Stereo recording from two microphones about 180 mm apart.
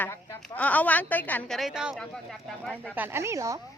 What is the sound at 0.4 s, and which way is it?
A woman's voice, 10° left (ahead or behind).